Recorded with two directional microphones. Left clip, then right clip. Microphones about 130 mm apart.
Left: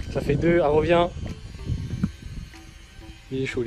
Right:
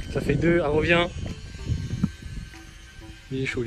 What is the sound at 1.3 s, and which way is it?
Music, 90° left.